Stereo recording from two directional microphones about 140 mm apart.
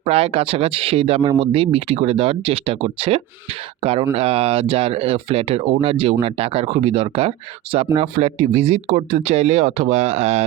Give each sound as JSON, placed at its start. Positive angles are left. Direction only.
{"t": 0.0, "sound": "speech", "side_deg": -45}